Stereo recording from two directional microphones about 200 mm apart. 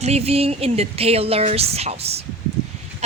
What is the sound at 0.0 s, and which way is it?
Speech, 30° right (ahead or behind).